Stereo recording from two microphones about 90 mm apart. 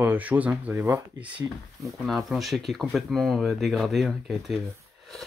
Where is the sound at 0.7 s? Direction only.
35° right (ahead or behind).